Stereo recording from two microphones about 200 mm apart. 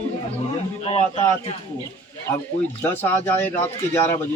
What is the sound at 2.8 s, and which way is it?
A man's voice, 10° left (ahead or behind).